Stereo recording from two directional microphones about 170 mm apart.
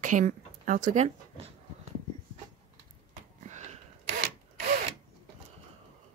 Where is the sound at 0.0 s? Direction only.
50° right (ahead or behind).